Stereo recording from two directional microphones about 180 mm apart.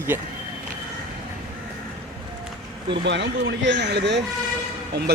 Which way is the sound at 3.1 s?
80° right.